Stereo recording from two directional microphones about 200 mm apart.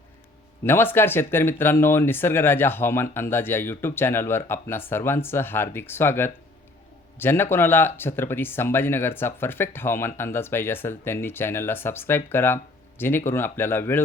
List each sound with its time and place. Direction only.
0.6 s speech: 10° left (ahead or behind)